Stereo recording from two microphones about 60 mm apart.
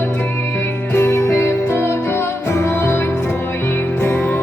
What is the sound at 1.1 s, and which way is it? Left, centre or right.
Music, left.